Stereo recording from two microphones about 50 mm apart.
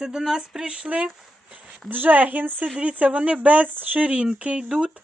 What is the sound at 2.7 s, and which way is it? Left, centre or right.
Speech, centre.